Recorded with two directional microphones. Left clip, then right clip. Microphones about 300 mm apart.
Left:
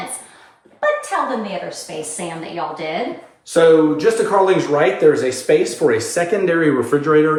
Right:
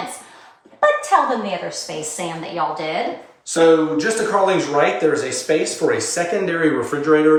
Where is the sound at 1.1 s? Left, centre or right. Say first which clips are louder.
Right 5 dB; centre.